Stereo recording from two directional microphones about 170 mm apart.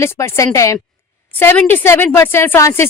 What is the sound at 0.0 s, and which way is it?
Speech, 15° left (ahead or behind).